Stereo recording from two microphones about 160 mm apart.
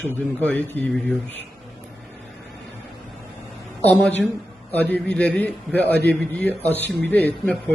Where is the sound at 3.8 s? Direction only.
10° left (ahead or behind).